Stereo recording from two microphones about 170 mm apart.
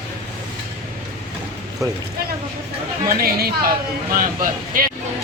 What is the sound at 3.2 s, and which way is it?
Speech, 60° right (ahead or behind).